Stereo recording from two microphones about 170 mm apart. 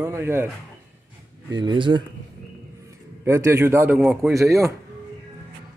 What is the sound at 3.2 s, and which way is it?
A man's voice, 15° right (ahead or behind).